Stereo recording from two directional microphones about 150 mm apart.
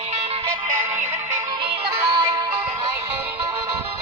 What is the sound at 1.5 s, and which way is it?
Music, 35° right (ahead or behind).